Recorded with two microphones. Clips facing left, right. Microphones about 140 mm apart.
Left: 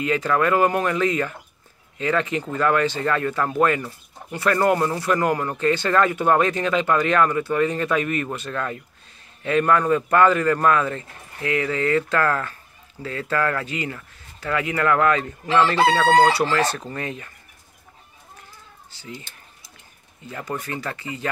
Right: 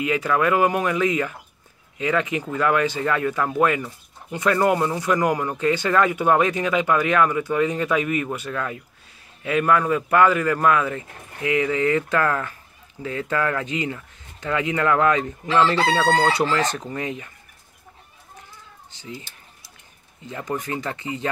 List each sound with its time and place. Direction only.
0.0 s speech: 10° right (ahead or behind)
18.9 s speech: 20° right (ahead or behind)
20.2 s speech: 15° right (ahead or behind)